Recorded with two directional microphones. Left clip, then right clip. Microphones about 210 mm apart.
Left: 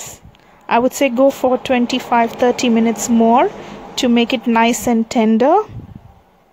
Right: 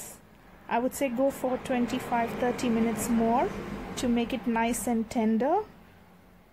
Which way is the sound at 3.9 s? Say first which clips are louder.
Left 15 dB; 40° left (ahead or behind).